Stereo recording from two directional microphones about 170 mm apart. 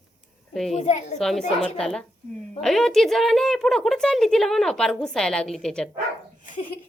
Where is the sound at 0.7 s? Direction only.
45° left (ahead or behind).